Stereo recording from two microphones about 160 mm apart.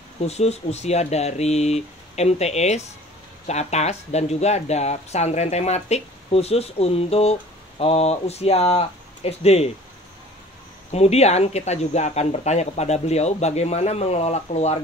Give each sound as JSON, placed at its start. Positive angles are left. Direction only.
{"t": 0.3, "sound": "speech", "side_deg": 45}
{"t": 10.9, "sound": "speech", "side_deg": 40}